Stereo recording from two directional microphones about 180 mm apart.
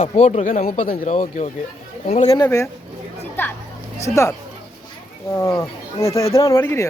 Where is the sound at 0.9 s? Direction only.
45° left (ahead or behind).